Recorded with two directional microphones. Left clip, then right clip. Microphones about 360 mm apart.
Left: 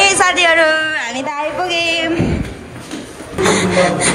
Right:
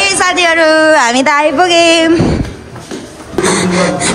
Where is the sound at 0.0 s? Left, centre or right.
Centre.